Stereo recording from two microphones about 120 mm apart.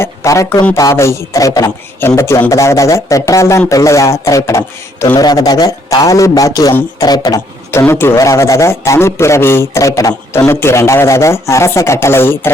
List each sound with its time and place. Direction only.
0.0 s a sound: 25° left (ahead or behind)
0.8 s a man's voice: 25° left (ahead or behind)
7.7 s a man's voice: 20° left (ahead or behind)